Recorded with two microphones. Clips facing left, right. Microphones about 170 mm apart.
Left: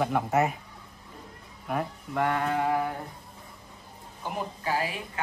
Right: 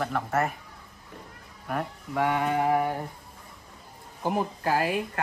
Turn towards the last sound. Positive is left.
turn(degrees=-50)  # may be behind; listen again after turning